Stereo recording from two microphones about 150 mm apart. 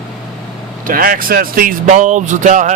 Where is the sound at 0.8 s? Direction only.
70° right (ahead or behind).